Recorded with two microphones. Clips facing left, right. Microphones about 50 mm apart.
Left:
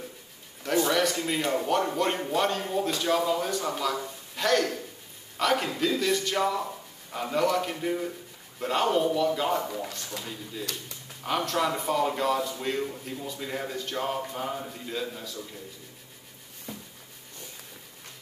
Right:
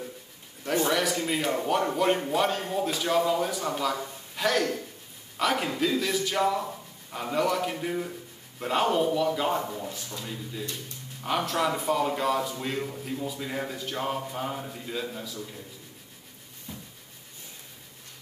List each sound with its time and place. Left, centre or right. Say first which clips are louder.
0.8 s speech: even; centre
9.7 s speech: left 1 dB; left
11.2 s speech: even; centre
16.7 s a sound: left 2 dB; left